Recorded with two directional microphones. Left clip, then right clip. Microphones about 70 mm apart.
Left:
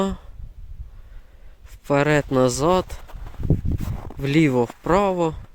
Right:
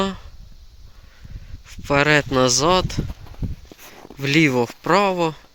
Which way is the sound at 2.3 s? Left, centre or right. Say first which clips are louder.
Right 2 dB; left.